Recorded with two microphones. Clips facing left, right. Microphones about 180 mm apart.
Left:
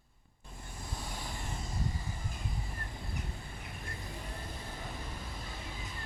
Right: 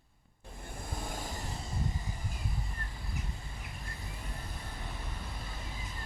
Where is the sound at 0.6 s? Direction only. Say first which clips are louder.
Right 3 dB; 55° right (ahead or behind).